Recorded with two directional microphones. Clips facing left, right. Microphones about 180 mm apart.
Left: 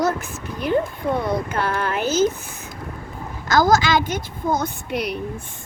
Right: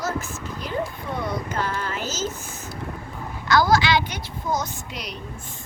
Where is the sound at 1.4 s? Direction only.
55° left (ahead or behind).